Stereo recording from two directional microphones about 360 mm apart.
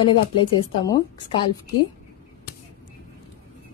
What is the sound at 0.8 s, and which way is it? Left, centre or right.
Speech, centre.